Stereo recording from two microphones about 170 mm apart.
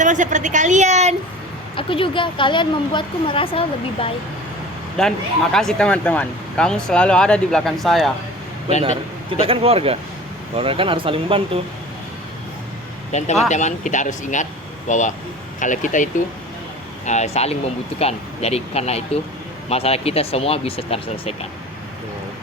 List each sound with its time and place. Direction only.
0.0 s a woman's voice: 45° right (ahead or behind)
1.7 s speech: 30° left (ahead or behind)
4.9 s speech: 5° left (ahead or behind)
9.4 s speech: 35° right (ahead or behind)
13.1 s speech: 40° left (ahead or behind)
17.1 s speech: 40° left (ahead or behind)